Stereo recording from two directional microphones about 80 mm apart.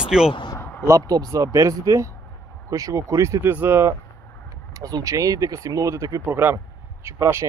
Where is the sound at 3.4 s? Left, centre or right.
Right.